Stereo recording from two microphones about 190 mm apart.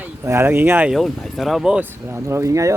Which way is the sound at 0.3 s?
10° right (ahead or behind).